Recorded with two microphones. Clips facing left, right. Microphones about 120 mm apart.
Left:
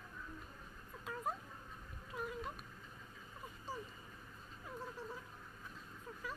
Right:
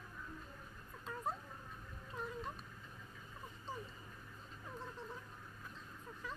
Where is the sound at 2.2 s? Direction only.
10° left (ahead or behind).